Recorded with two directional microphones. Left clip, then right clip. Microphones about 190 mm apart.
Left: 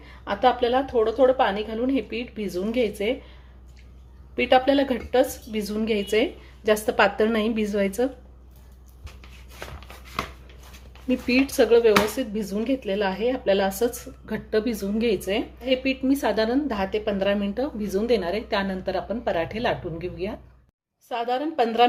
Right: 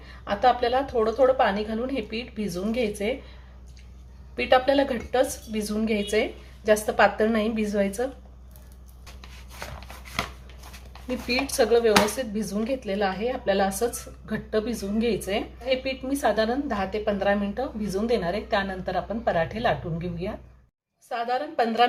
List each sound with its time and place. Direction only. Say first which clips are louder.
0.0 s speech: left 1 dB; 30° left (ahead or behind)
4.4 s speech: left 1 dB; 35° left (ahead or behind)
11.3 s speech: left 3 dB; 35° left (ahead or behind)